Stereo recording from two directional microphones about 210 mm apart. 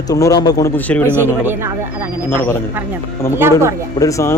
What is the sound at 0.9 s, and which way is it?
Speech, 5° left (ahead or behind).